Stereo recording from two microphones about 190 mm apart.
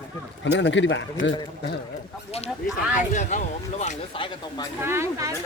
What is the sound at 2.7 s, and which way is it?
Speech, 5° right (ahead or behind).